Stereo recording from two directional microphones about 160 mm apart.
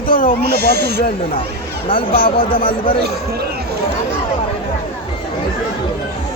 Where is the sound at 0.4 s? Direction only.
90° right.